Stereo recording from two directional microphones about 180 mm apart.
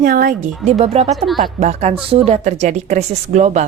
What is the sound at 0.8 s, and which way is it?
Speech, 35° right (ahead or behind).